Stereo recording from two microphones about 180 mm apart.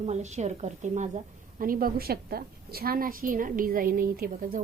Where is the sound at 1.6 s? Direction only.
50° right (ahead or behind).